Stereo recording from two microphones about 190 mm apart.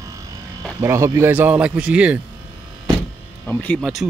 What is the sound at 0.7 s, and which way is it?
Speech, 15° right (ahead or behind).